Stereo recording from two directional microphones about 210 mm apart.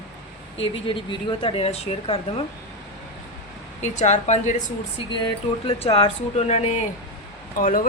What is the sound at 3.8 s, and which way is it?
Speech, 35° left (ahead or behind).